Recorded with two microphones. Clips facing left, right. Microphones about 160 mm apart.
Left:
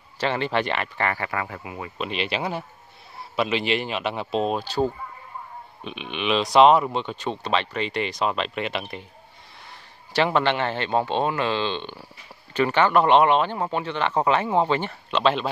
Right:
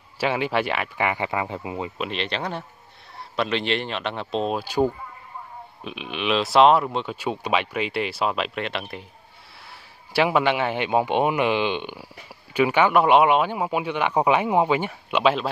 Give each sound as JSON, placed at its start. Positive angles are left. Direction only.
{"t": 0.2, "sound": "speech", "side_deg": -10}
{"t": 2.0, "sound": "speech", "side_deg": 5}
{"t": 4.6, "sound": "speech", "side_deg": -10}
{"t": 10.1, "sound": "speech", "side_deg": -10}